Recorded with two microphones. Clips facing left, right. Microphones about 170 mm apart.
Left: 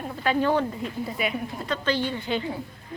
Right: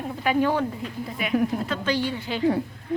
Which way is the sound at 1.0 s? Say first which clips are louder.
Right 8 dB; centre (ahead or behind).